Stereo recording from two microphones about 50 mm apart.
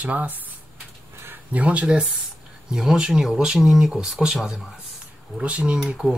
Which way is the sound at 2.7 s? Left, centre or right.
Centre.